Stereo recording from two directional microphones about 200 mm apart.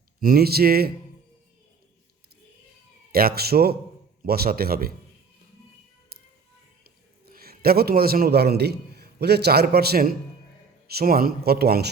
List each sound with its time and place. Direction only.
0.2 s speech: 50° right (ahead or behind)
3.1 s speech: 50° right (ahead or behind)
6.1 s music: 50° right (ahead or behind)
7.3 s a man's voice: 50° right (ahead or behind)